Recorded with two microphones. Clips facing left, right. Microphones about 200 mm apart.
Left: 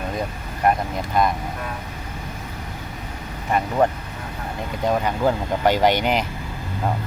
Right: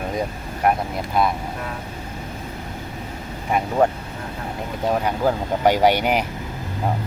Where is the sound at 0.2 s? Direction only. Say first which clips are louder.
Even; 5° right (ahead or behind).